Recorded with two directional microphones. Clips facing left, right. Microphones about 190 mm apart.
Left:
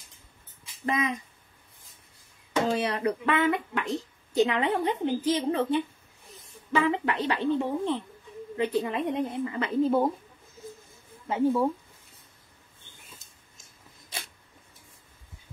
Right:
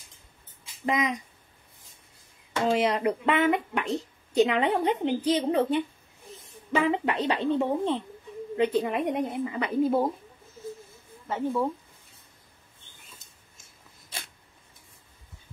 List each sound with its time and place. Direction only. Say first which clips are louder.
0.8 s a woman's voice: right 1 dB; 20° right (ahead or behind)
2.7 s a woman's voice: right 3 dB; 20° right (ahead or behind)
11.2 s speech: left 3 dB; 10° left (ahead or behind)